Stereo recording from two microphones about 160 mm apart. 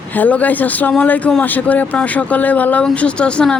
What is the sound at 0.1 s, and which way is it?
Speech, 10° left (ahead or behind).